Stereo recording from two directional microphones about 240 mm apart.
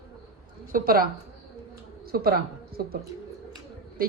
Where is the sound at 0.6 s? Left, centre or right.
Right.